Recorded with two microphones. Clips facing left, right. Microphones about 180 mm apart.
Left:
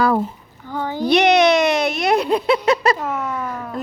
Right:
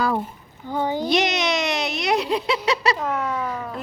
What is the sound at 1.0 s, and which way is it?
Baby cry, 60° left (ahead or behind).